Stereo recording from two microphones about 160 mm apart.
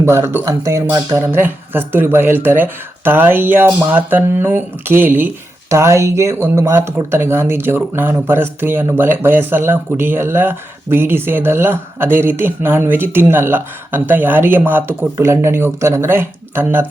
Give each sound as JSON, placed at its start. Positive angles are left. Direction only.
{"t": 0.0, "sound": "speech", "side_deg": -15}